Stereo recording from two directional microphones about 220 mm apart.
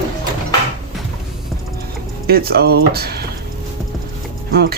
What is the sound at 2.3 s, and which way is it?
Speech, 45° right (ahead or behind).